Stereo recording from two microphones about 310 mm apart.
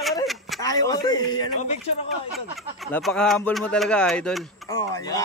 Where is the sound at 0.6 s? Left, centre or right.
Centre.